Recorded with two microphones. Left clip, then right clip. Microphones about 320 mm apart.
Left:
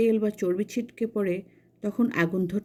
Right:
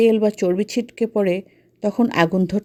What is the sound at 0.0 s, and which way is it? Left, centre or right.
Speech, right.